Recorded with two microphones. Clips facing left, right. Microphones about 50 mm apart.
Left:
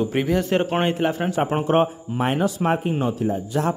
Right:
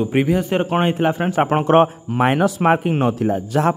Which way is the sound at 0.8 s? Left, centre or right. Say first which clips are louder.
Right 3 dB; right.